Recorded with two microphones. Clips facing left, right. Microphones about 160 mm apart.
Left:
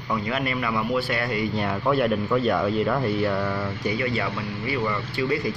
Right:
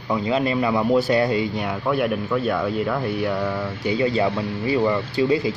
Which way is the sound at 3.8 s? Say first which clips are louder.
Right 7 dB; 25° right (ahead or behind).